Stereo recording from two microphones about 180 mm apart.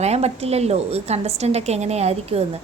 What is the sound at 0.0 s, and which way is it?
A woman's voice, 35° right (ahead or behind).